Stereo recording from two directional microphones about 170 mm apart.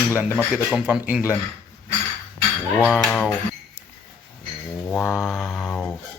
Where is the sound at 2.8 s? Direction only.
5° left (ahead or behind).